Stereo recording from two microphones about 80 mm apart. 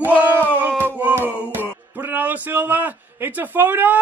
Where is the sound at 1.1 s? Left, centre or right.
Right.